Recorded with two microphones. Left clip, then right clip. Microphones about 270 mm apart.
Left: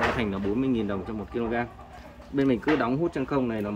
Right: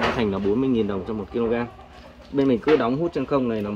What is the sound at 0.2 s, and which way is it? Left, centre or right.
Speech, centre.